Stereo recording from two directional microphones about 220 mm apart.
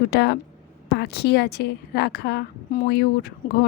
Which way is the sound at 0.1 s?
50° left (ahead or behind).